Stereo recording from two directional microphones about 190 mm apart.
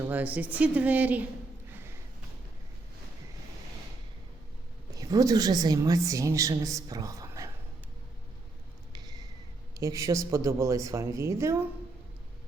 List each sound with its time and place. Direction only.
0.0 s a woman's voice: 10° right (ahead or behind)
4.9 s a woman's voice: 20° right (ahead or behind)
8.9 s a sound: 20° right (ahead or behind)
9.7 s a woman's voice: 15° right (ahead or behind)